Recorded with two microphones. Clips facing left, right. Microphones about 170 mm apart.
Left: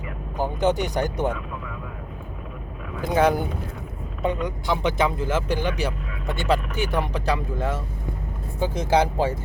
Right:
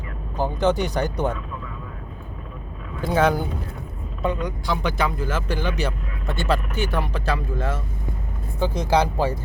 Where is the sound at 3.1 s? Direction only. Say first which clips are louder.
Even; 15° left (ahead or behind).